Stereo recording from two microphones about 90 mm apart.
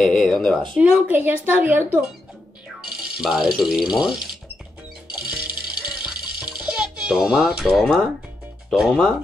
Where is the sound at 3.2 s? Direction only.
Centre (ahead or behind).